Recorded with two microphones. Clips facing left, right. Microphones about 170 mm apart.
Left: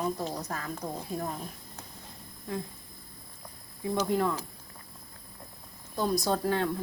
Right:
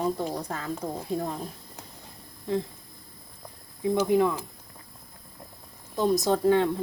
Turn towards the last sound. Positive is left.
turn(degrees=-20)  # may be behind; listen again after turning